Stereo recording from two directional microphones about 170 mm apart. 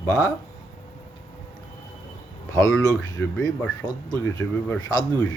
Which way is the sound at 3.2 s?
5° left (ahead or behind).